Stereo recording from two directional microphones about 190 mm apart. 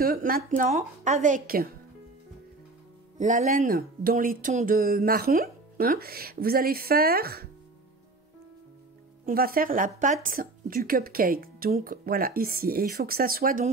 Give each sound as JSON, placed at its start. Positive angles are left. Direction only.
{"t": 0.0, "sound": "speech", "side_deg": -50}
{"t": 0.6, "sound": "a woman's voice", "side_deg": -40}
{"t": 3.2, "sound": "speech", "side_deg": -45}
{"t": 9.2, "sound": "speech", "side_deg": -50}